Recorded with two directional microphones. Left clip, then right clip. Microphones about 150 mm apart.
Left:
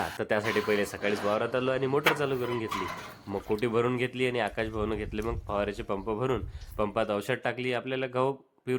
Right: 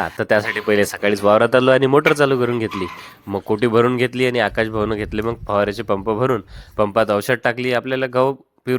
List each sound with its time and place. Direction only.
0.2 s speech: 45° right (ahead or behind)